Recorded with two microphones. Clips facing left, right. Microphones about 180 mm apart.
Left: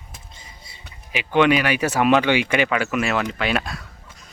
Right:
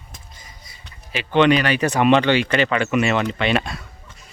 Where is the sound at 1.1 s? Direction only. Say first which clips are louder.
Right 1 dB; 10° left (ahead or behind).